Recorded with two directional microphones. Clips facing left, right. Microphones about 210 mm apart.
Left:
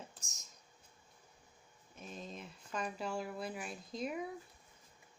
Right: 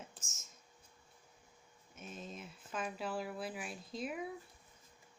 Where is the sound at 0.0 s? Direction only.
35° left (ahead or behind).